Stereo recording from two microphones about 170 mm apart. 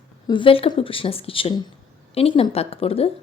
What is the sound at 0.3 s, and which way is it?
A woman's voice, 30° left (ahead or behind).